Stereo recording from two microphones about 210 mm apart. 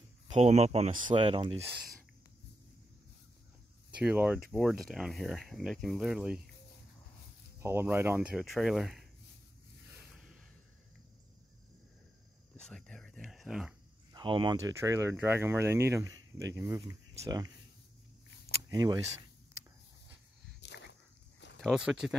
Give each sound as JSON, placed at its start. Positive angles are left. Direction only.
{"t": 0.3, "sound": "speech", "side_deg": -30}
{"t": 4.0, "sound": "speech", "side_deg": -5}
{"t": 7.6, "sound": "speech", "side_deg": -10}
{"t": 9.8, "sound": "a sound", "side_deg": 0}
{"t": 12.5, "sound": "a sound", "side_deg": 5}
{"t": 14.1, "sound": "speech", "side_deg": -20}
{"t": 17.2, "sound": "speech", "side_deg": -20}
{"t": 18.7, "sound": "speech", "side_deg": -20}
{"t": 20.6, "sound": "dog", "side_deg": 55}
{"t": 21.5, "sound": "speech", "side_deg": 0}